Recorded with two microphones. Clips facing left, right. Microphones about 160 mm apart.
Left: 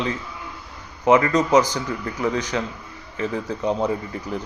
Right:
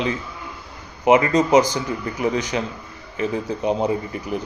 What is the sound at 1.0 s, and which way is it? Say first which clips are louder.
A man's voice: right 1 dB; 20° right (ahead or behind).